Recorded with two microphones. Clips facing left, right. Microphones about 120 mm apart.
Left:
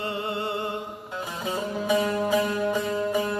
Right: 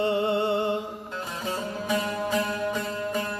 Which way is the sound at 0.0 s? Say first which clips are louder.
Right 6 dB; 25° right (ahead or behind).